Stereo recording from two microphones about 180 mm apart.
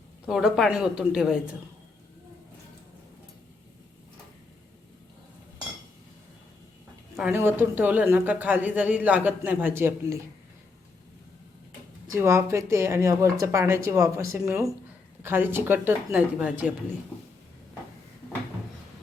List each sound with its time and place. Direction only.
0.3 s a woman's voice: centre (ahead or behind)
7.2 s speech: 10° right (ahead or behind)
12.1 s speech: 15° right (ahead or behind)